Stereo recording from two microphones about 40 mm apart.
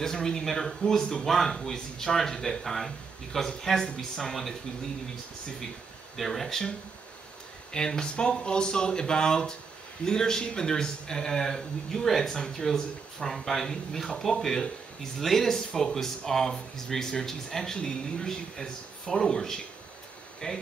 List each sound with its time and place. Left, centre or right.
0.0 s speech: centre
1.2 s speech: centre
6.1 s speech: centre
7.7 s speech: centre